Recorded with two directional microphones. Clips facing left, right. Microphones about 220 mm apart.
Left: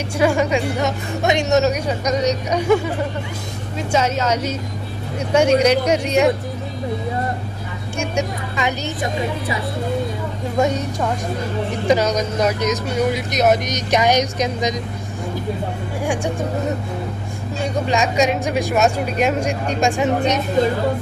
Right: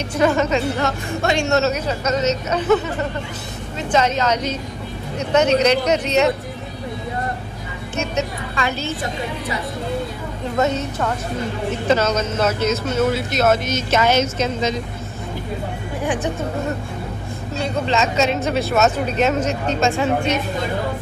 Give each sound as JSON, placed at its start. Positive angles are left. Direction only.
{"t": 0.2, "sound": "speech", "side_deg": 10}
{"t": 8.0, "sound": "speech", "side_deg": 15}
{"t": 10.6, "sound": "speech", "side_deg": 15}
{"t": 16.0, "sound": "speech", "side_deg": 10}
{"t": 17.6, "sound": "speech", "side_deg": 15}